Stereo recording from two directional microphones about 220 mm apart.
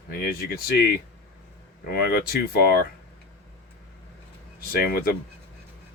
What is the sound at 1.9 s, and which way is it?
Speech, 45° left (ahead or behind).